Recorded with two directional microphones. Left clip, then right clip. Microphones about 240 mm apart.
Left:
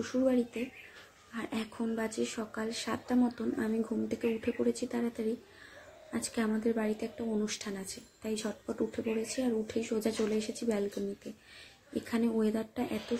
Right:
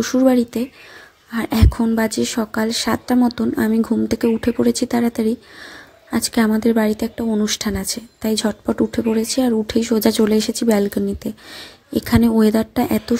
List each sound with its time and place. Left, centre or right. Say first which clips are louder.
0.0 s a woman's voice: right 14 dB; right